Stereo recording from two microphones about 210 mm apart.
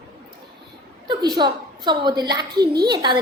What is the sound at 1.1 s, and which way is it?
A woman's voice, 20° right (ahead or behind).